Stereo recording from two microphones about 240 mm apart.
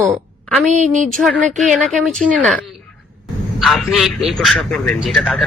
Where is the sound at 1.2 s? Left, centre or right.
Centre.